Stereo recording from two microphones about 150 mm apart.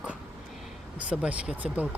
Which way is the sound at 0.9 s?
10° right (ahead or behind).